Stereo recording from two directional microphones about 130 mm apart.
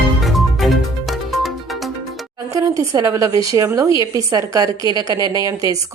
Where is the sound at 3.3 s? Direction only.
40° left (ahead or behind).